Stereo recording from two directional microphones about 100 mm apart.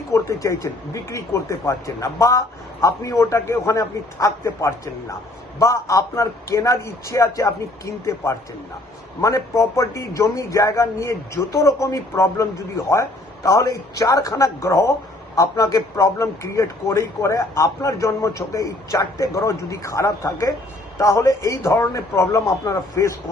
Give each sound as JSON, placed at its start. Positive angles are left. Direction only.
{"t": 0.1, "sound": "a man's voice", "side_deg": 30}